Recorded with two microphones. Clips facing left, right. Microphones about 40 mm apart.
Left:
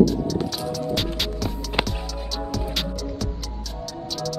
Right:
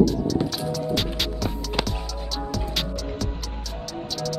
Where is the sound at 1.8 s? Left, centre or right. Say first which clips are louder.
Left 3 dB; left.